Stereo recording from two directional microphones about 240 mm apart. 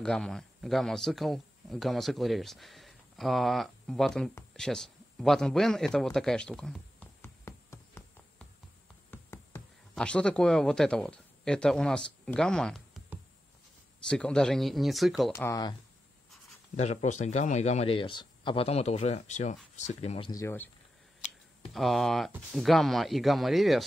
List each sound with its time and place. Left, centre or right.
0.0 s speech: centre
9.1 s a sound: centre
14.0 s speech: centre
15.3 s speech: centre
16.7 s speech: left; by 20.7 s centre
21.7 s speech: centre